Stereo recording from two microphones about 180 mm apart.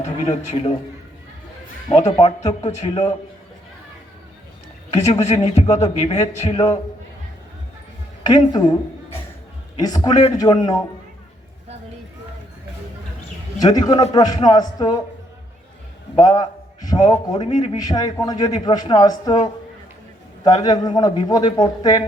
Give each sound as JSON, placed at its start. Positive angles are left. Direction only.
{"t": 0.0, "sound": "a man's voice", "side_deg": 40}
{"t": 1.9, "sound": "a man's voice", "side_deg": 40}
{"t": 4.9, "sound": "a man's voice", "side_deg": 40}
{"t": 8.3, "sound": "a woman's voice", "side_deg": 25}
{"t": 13.6, "sound": "a man's voice", "side_deg": 20}
{"t": 16.2, "sound": "a man's voice", "side_deg": 20}
{"t": 17.4, "sound": "a man's voice", "side_deg": 35}
{"t": 17.7, "sound": "a man's voice", "side_deg": 20}
{"t": 20.4, "sound": "a man's voice", "side_deg": 20}